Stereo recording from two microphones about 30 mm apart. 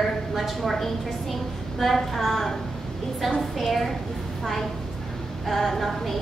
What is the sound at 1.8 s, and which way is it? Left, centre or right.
A woman's voice, centre.